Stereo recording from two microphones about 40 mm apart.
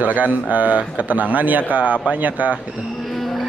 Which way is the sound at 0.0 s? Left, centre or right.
Right.